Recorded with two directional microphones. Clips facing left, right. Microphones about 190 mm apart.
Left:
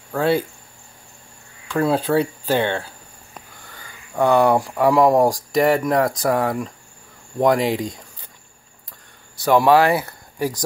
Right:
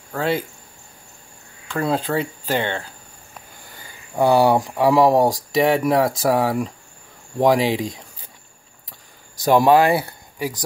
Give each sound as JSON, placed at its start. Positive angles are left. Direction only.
{"t": 1.7, "sound": "speech", "side_deg": 5}
{"t": 2.1, "sound": "speech", "side_deg": -10}
{"t": 4.2, "sound": "speech", "side_deg": -30}
{"t": 4.6, "sound": "speech", "side_deg": 0}
{"t": 9.4, "sound": "speech", "side_deg": -40}
{"t": 9.7, "sound": "speech", "side_deg": -25}